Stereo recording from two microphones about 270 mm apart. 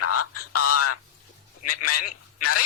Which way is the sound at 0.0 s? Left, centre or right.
Left.